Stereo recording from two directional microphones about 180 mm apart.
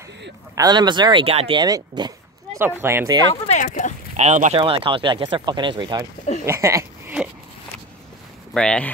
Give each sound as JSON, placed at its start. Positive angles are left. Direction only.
{"t": 0.6, "sound": "speech", "side_deg": -25}
{"t": 1.6, "sound": "speech", "side_deg": -20}
{"t": 3.4, "sound": "speech", "side_deg": 45}
{"t": 4.2, "sound": "speech", "side_deg": -40}
{"t": 6.4, "sound": "a sound", "side_deg": -15}
{"t": 8.5, "sound": "speech", "side_deg": 5}